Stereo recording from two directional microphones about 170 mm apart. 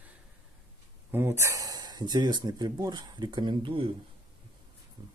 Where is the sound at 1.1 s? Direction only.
15° right (ahead or behind); by 3.9 s 30° right (ahead or behind).